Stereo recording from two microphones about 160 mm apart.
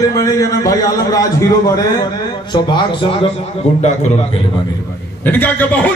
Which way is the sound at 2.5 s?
30° left (ahead or behind).